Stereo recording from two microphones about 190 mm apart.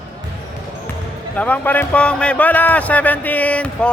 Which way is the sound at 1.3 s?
10° left (ahead or behind).